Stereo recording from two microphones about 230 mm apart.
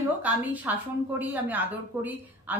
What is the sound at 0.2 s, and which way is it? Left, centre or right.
A woman's voice, centre.